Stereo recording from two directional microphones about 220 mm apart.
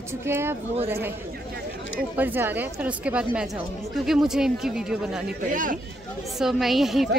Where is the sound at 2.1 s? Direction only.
10° right (ahead or behind).